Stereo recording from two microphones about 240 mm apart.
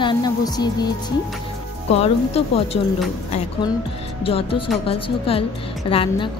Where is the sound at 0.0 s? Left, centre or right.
Centre.